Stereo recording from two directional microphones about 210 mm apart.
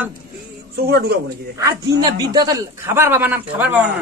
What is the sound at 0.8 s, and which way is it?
Speech, 50° right (ahead or behind).